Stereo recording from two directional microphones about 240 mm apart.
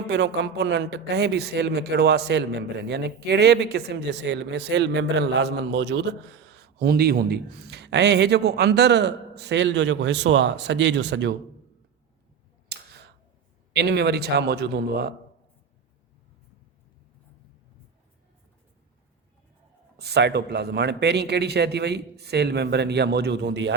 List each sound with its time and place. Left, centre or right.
0.1 s speech: right
12.6 s tick: right
13.7 s speech: right
20.0 s speech: right